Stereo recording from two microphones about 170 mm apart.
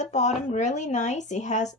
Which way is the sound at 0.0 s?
45° left (ahead or behind).